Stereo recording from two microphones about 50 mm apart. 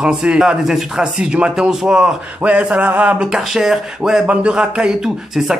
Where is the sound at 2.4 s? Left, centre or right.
Right.